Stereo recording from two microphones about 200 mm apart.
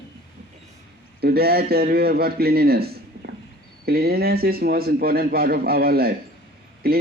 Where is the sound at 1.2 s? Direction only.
50° right (ahead or behind).